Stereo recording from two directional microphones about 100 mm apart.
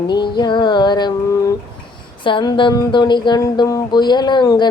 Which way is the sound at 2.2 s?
55° left (ahead or behind).